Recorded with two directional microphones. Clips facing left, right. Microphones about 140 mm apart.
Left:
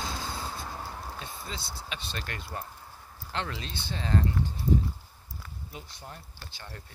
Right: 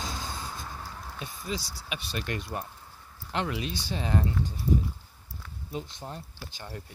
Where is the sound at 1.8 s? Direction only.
15° right (ahead or behind).